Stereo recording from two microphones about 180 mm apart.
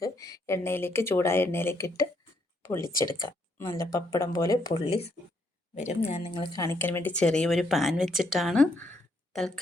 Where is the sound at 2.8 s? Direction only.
50° left (ahead or behind).